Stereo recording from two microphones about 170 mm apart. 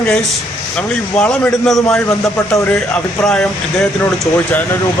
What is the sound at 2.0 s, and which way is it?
Speech, 15° left (ahead or behind).